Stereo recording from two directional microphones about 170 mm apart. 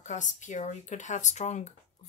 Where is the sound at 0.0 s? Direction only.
45° left (ahead or behind).